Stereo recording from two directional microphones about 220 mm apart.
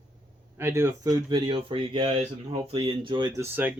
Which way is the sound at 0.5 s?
10° right (ahead or behind).